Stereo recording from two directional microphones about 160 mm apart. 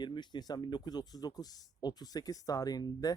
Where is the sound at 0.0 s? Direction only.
30° left (ahead or behind).